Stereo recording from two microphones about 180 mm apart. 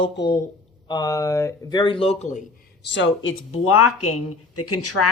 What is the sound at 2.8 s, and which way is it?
Speech, 85° left.